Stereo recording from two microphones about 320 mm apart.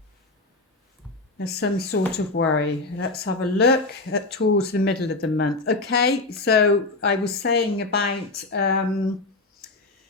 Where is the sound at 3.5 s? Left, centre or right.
Left.